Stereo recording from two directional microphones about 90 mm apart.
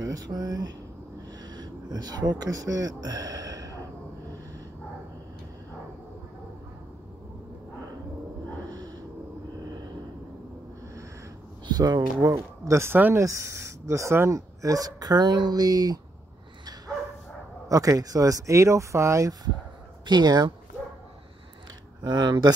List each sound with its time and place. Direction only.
0.0 s speech: 45° right (ahead or behind)
8.7 s a sound: 45° right (ahead or behind)
11.6 s speech: 50° right (ahead or behind); by 13.2 s 25° right (ahead or behind)
13.2 s speech: 35° right (ahead or behind)
17.6 s speech: 40° right (ahead or behind)
20.1 s speech: 50° right (ahead or behind)
22.0 s speech: 55° right (ahead or behind)